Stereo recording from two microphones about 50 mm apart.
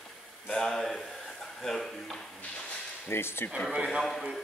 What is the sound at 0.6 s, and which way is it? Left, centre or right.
Speech, centre.